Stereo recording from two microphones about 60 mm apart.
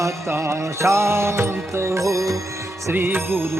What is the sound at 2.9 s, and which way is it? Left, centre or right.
Music, right.